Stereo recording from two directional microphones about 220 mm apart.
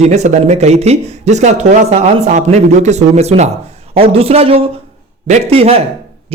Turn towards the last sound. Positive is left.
turn(degrees=-25)  # may be behind; listen again after turning